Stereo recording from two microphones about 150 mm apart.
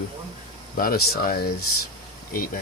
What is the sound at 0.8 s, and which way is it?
Speech, 85° left.